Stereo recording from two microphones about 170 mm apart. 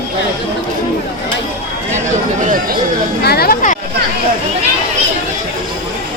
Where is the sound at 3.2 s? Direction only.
65° left (ahead or behind).